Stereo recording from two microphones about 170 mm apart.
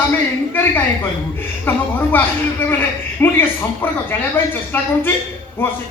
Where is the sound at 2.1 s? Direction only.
10° left (ahead or behind).